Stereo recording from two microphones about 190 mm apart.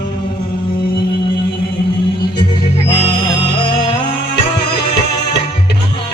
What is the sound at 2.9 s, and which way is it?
Music, 30° left (ahead or behind).